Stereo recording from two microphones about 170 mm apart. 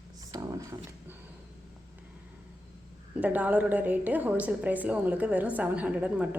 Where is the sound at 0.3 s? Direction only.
20° right (ahead or behind).